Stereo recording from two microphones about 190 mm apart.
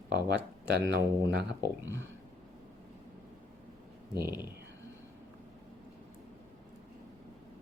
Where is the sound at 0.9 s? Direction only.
65° right (ahead or behind).